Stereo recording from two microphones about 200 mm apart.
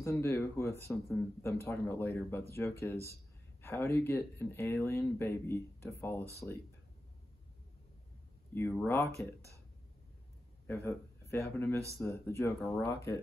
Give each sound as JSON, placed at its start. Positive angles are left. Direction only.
{"t": 0.0, "sound": "speech", "side_deg": 10}
{"t": 8.5, "sound": "speech", "side_deg": 10}
{"t": 10.7, "sound": "speech", "side_deg": 15}